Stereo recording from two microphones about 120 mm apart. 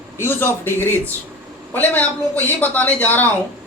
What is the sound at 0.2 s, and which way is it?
A man's voice, 20° left (ahead or behind).